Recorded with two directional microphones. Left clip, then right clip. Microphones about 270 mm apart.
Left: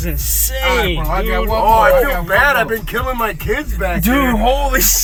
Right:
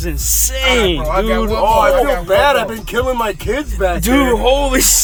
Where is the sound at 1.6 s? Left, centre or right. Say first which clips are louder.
Left 1 dB; right.